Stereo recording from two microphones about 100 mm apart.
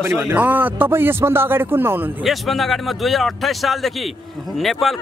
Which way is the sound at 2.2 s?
Centre (ahead or behind).